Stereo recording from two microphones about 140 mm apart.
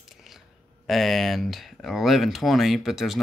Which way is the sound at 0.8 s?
Centre (ahead or behind).